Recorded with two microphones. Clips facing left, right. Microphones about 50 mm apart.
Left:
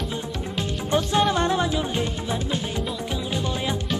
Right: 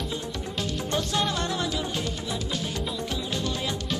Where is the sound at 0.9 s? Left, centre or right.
Centre.